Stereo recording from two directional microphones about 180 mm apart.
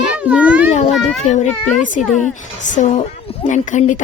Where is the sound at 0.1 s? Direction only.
5° right (ahead or behind).